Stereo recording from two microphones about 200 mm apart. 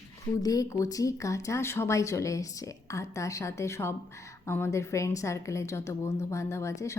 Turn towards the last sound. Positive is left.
turn(degrees=15)  # may be behind; listen again after turning